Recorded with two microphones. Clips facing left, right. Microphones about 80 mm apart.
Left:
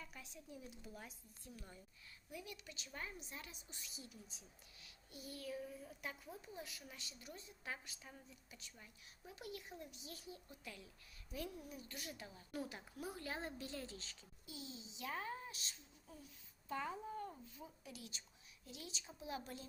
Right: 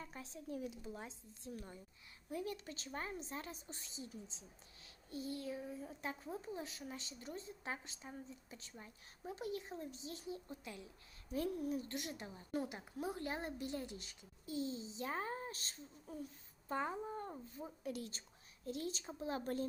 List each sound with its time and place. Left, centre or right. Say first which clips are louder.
0.0 s a woman's voice: right 6 dB; right
2.3 s a woman's voice: right 9 dB; right
11.3 s a woman's voice: right 10 dB; right
11.9 s a woman's voice: right 6 dB; right
14.4 s a woman's voice: right 11 dB; right